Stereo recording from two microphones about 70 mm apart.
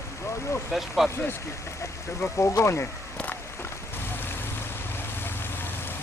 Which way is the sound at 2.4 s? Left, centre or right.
Left.